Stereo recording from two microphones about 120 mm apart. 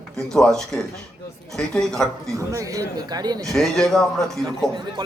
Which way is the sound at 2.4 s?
25° right (ahead or behind).